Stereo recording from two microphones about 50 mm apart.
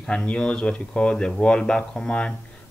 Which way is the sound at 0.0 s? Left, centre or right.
Centre.